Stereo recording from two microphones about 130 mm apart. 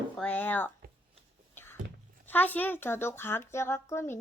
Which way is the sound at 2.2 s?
15° left (ahead or behind).